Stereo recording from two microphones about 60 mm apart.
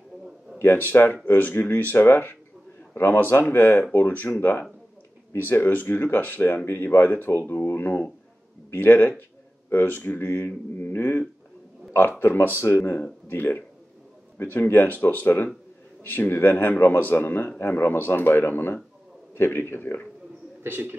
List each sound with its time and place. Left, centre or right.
0.6 s speech: left
20.6 s a man's voice: right